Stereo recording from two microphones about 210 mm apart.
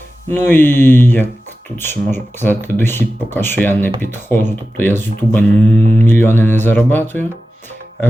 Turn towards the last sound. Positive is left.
turn(degrees=10)  # may be behind; listen again after turning